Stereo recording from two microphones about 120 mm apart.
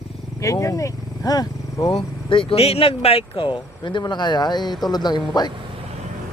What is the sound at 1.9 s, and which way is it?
Speech, 45° left (ahead or behind).